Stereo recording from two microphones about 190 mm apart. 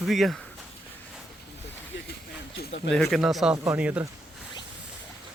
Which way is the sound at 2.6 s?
65° left (ahead or behind).